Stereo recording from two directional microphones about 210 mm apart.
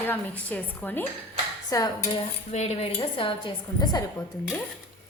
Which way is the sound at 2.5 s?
30° left (ahead or behind).